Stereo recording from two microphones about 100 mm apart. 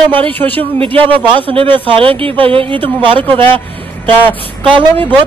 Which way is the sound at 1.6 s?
60° right (ahead or behind).